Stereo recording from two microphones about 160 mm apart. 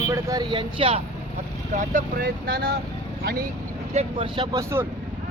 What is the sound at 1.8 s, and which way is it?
Speech, 60° right (ahead or behind).